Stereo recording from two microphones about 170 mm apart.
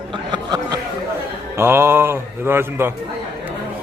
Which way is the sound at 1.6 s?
15° right (ahead or behind).